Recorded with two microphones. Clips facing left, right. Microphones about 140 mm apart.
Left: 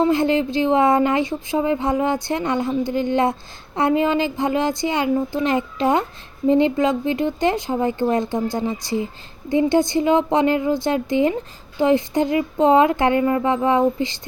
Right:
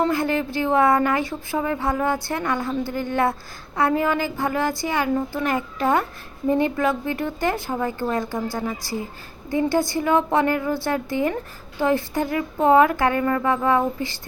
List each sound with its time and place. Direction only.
0.0 s speech: 20° left (ahead or behind)